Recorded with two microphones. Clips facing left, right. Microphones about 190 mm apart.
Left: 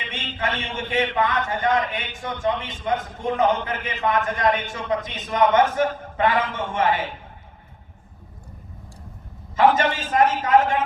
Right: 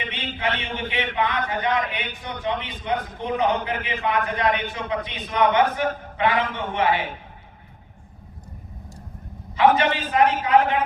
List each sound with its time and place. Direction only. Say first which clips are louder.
0.1 s a man's voice: left 1 dB; 45° left (ahead or behind)
9.7 s a man's voice: even; 45° left (ahead or behind)